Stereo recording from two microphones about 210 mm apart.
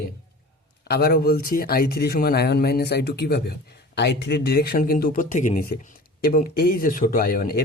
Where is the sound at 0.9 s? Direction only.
50° left (ahead or behind).